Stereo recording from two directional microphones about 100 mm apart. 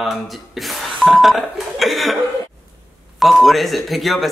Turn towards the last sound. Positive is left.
turn(degrees=0)  # may be behind; listen again after turning